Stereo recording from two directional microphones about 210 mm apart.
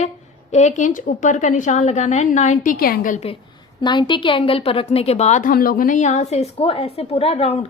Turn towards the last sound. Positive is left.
turn(degrees=30)  # may be behind; listen again after turning